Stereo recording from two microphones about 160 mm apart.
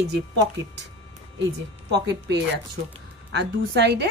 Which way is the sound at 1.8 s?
90° right.